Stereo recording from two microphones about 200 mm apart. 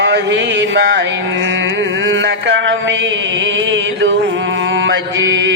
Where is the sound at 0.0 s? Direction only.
65° right (ahead or behind).